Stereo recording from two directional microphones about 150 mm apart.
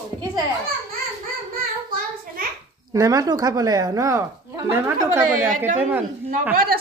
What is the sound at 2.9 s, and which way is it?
Speech, 20° right (ahead or behind).